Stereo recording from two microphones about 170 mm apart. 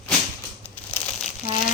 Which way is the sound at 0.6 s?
10° left (ahead or behind).